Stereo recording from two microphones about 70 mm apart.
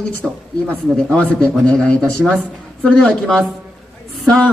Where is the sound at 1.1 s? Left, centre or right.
Centre.